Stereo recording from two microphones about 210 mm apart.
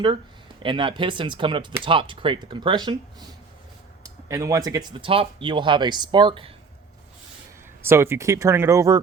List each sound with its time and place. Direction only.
0.6 s speech: 25° right (ahead or behind)
4.0 s speech: 15° right (ahead or behind)
7.8 s speech: 10° right (ahead or behind)